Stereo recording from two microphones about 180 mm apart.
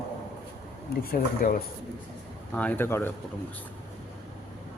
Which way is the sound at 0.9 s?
55° left (ahead or behind).